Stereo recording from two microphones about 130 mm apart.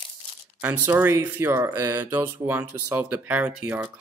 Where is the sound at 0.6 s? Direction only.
15° right (ahead or behind).